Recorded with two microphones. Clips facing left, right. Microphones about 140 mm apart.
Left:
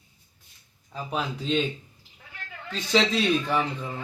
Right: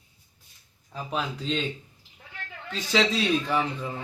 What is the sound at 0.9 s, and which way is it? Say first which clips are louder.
Speech: left 1 dB; centre (ahead or behind).